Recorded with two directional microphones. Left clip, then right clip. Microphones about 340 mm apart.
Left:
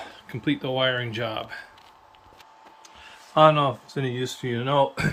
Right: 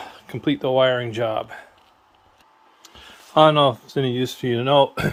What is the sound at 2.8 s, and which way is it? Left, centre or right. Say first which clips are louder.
Speech: right 4 dB; centre.